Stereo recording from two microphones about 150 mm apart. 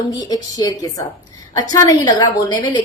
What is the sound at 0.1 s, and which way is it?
A woman's voice, 25° left (ahead or behind).